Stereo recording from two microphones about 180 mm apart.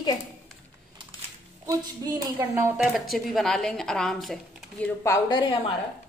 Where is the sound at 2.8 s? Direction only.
Centre (ahead or behind).